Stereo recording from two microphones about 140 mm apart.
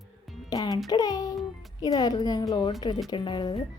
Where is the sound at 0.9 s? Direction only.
30° left (ahead or behind).